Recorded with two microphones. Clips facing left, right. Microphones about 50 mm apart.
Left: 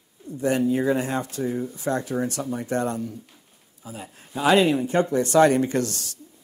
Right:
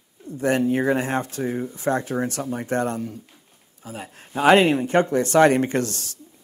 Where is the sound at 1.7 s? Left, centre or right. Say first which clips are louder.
Right 4 dB; right.